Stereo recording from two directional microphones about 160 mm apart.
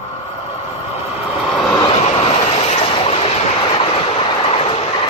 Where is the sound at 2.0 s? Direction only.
40° left (ahead or behind).